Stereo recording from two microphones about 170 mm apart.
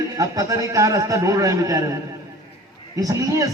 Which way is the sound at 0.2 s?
20° right (ahead or behind).